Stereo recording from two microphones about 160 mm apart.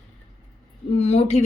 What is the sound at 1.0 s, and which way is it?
Speech, 40° left (ahead or behind).